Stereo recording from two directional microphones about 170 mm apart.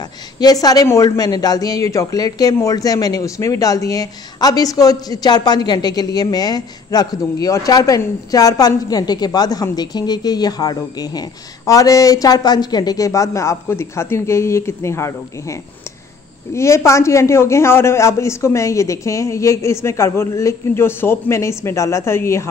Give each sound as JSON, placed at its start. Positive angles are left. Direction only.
{"t": 0.4, "sound": "a man's voice", "side_deg": 20}